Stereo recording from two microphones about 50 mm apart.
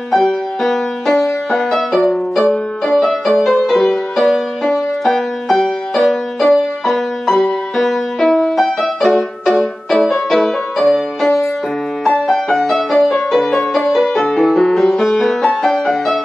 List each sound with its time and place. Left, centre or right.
0.1 s music: centre
12.3 s music: centre